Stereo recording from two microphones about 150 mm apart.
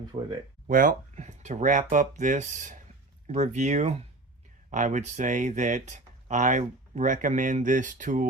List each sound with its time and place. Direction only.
0.1 s speech: 45° right (ahead or behind)
0.7 s speech: 65° right (ahead or behind)